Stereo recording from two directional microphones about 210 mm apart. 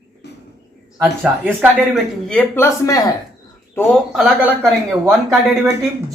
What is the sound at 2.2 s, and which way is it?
Speech, 5° left (ahead or behind).